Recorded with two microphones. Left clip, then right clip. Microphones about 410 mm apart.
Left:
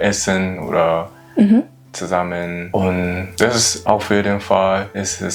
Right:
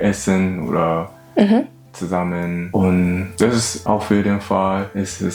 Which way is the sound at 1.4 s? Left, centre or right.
Right.